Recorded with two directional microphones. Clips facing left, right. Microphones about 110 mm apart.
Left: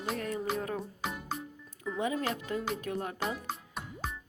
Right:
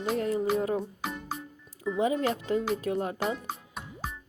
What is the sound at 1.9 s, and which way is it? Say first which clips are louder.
A woman's voice: right 5 dB; 25° right (ahead or behind).